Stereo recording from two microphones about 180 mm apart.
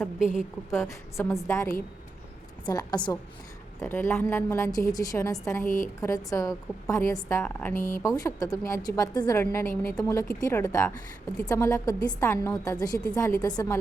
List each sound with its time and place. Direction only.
0.7 s a woman's voice: 15° left (ahead or behind)
5.6 s a woman's voice: 45° left (ahead or behind)
6.0 s a woman's voice: 15° left (ahead or behind)